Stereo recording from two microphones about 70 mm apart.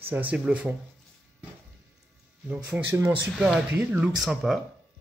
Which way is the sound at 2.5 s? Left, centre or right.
Centre.